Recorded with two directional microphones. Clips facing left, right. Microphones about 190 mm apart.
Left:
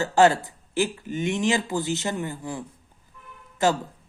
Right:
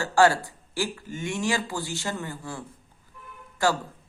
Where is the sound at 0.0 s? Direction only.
20° left (ahead or behind).